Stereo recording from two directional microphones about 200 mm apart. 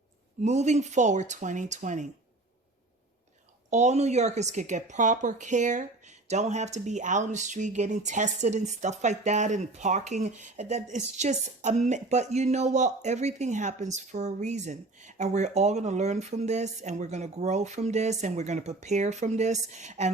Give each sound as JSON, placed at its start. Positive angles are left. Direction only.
{"t": 0.4, "sound": "speech", "side_deg": -35}
{"t": 3.7, "sound": "speech", "side_deg": -35}